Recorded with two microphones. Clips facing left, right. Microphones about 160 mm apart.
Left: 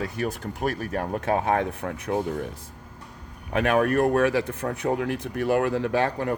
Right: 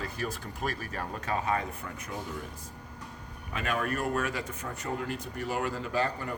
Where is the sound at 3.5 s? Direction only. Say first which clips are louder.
Left 10 dB; 70° left (ahead or behind).